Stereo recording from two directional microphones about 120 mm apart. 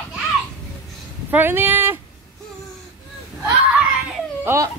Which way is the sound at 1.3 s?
15° right (ahead or behind).